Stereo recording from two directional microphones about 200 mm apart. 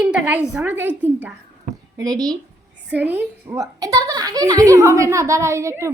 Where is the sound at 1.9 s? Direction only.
20° right (ahead or behind).